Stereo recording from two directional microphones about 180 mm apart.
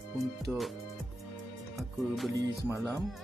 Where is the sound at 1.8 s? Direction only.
Centre (ahead or behind).